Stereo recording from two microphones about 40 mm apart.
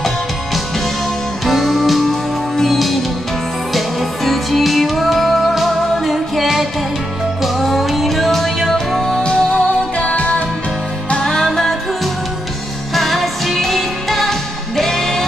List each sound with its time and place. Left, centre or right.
1.4 s music: centre
9.2 s music: left
11.5 s music: centre